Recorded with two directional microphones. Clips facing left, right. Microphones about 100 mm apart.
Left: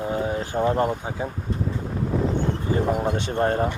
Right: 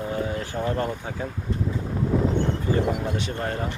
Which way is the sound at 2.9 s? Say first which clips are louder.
Left 5 dB; 40° left (ahead or behind).